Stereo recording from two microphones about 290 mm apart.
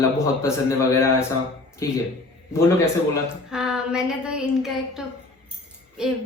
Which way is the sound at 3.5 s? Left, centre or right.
Centre.